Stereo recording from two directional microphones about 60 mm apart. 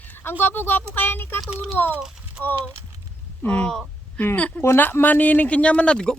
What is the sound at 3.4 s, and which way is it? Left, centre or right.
Speech, left.